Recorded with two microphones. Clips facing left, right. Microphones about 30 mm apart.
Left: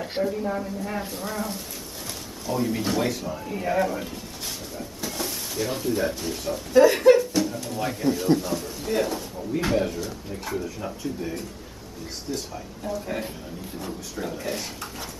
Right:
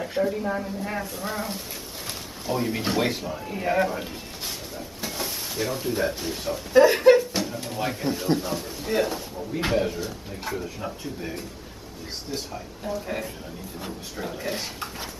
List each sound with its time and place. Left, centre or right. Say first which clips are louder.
0.2 s a man's voice: right 1 dB; centre; by 3.3 s right
3.3 s speech: right 1 dB; centre
4.7 s a sound: left 2 dB; centre
5.8 s speech: left 1 dB; centre
12.5 s a man's voice: even; centre